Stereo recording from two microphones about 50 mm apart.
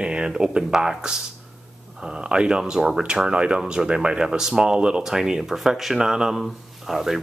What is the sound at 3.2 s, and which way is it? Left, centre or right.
Speech, right.